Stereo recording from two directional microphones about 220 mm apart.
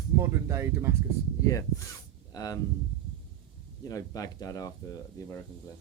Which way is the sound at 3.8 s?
15° left (ahead or behind).